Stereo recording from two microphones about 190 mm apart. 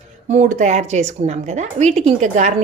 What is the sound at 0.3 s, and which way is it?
A woman's voice, 40° right (ahead or behind).